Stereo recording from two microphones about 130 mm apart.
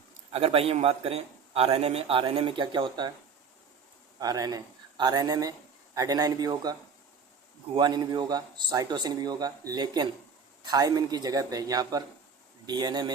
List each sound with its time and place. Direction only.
0.3 s a man's voice: 50° right (ahead or behind)
4.2 s a man's voice: 30° right (ahead or behind)
7.8 s a man's voice: 35° right (ahead or behind)